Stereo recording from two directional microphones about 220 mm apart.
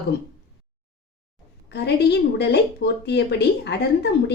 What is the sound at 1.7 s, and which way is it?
Speech, 50° left (ahead or behind).